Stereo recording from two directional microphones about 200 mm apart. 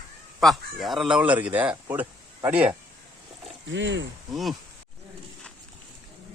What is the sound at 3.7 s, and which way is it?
Speech, 70° right (ahead or behind).